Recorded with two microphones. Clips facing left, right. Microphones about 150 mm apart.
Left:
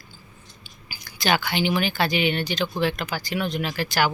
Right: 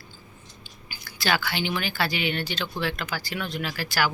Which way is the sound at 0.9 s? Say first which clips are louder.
Left 3 dB; 20° left (ahead or behind).